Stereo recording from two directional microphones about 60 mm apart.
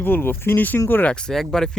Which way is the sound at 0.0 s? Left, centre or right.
Left.